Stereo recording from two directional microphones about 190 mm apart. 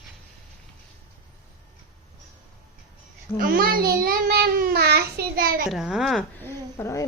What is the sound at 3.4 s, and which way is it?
A child's voice, 50° right (ahead or behind).